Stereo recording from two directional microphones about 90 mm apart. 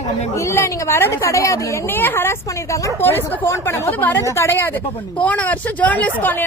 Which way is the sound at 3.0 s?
25° left (ahead or behind).